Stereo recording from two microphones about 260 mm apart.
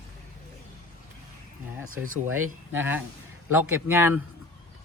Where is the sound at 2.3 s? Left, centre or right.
Right.